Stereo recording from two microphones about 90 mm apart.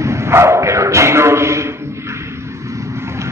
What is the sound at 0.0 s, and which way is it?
Bow-wow, 30° right (ahead or behind).